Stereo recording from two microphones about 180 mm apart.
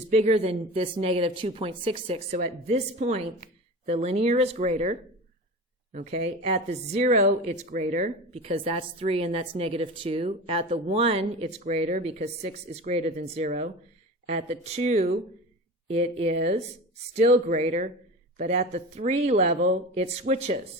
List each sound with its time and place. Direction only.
0.1 s speech: 35° right (ahead or behind)